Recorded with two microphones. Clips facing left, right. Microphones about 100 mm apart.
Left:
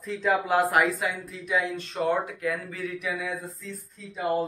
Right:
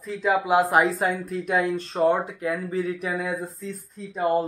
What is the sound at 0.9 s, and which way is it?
Speech, 50° right (ahead or behind).